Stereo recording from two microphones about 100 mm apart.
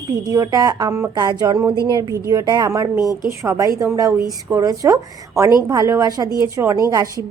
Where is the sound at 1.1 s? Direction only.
45° right (ahead or behind).